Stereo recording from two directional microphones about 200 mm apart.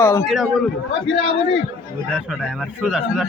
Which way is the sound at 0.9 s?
65° left (ahead or behind).